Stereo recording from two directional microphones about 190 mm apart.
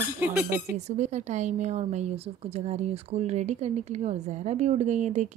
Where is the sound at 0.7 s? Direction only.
35° right (ahead or behind).